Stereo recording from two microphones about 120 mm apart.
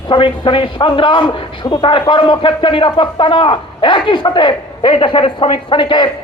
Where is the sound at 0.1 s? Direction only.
45° left (ahead or behind).